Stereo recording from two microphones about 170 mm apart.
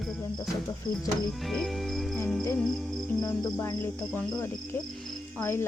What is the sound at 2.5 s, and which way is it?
Music, centre (ahead or behind).